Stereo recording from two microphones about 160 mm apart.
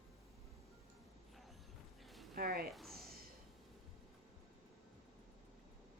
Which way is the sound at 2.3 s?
70° right (ahead or behind).